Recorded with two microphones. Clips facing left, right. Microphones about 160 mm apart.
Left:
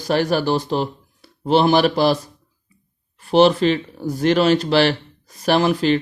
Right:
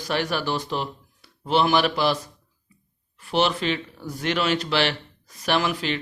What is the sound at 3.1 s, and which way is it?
Speech, 35° left (ahead or behind).